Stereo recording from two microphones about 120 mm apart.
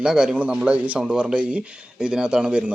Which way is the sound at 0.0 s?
5° right (ahead or behind).